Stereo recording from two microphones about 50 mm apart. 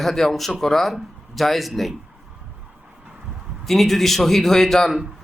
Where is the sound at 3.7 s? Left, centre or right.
Centre.